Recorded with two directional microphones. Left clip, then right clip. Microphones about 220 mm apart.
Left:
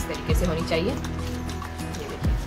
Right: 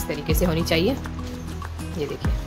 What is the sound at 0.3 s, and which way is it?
Speech, 45° right (ahead or behind).